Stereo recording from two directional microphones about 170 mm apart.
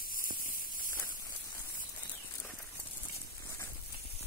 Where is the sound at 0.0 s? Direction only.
55° left (ahead or behind).